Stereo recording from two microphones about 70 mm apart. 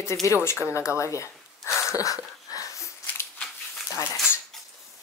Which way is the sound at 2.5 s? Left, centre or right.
Left.